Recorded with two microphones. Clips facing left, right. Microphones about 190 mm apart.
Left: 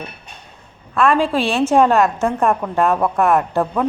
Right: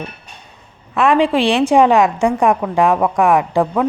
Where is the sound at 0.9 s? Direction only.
15° right (ahead or behind).